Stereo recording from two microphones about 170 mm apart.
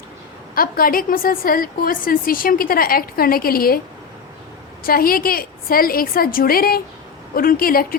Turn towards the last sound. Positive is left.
turn(degrees=60)  # may be behind; listen again after turning